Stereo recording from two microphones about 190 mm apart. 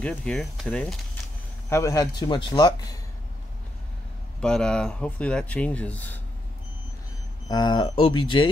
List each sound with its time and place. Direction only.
0.0 s speech: 5° left (ahead or behind)
1.7 s speech: 15° left (ahead or behind)
4.4 s speech: 5° left (ahead or behind)
7.4 s speech: 20° left (ahead or behind)